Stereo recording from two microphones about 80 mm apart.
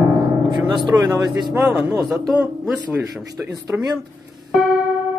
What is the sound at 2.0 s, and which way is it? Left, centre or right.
Speech, centre.